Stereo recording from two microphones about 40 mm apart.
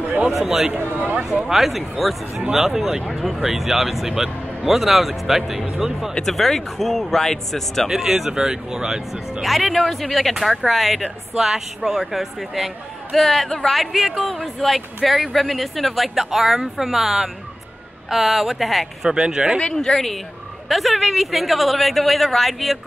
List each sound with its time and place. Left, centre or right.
0.0 s a sound: right
0.3 s speech: centre
0.7 s speech: right
1.5 s speech: centre
6.2 s speech: centre
7.9 s speech: centre
9.4 s speech: centre
19.0 s speech: centre
19.7 s speech: centre